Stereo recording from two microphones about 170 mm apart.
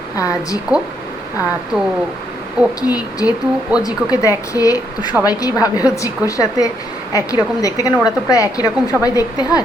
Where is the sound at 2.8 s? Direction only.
20° left (ahead or behind).